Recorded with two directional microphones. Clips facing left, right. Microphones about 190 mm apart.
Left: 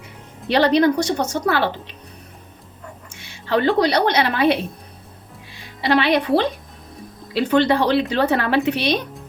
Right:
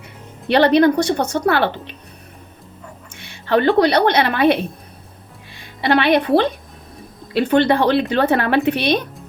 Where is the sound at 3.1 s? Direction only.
55° right (ahead or behind).